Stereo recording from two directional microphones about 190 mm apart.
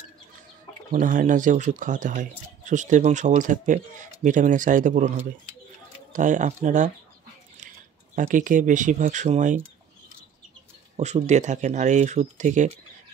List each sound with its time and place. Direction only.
0.9 s speech: 45° right (ahead or behind)
8.2 s speech: 45° right (ahead or behind)
11.0 s speech: 35° right (ahead or behind)